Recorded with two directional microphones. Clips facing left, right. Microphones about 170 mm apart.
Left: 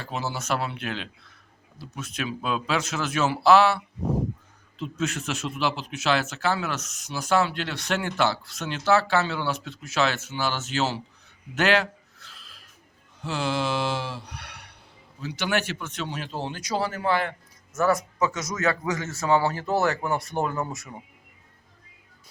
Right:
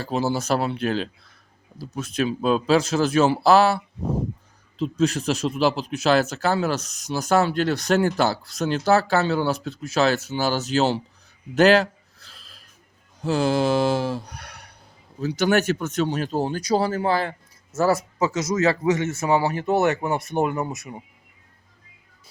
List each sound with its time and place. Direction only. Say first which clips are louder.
0.0 s speech: right 8 dB; 35° right (ahead or behind)
4.8 s speech: right 7 dB; 35° right (ahead or behind)
11.5 s a sound: right 7 dB; 35° right (ahead or behind)
13.2 s speech: right 7 dB; 40° right (ahead or behind); by 21.0 s 20° right (ahead or behind)